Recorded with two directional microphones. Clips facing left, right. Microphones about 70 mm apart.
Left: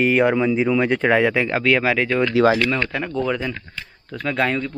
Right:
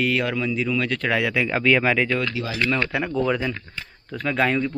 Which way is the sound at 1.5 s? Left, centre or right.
Centre.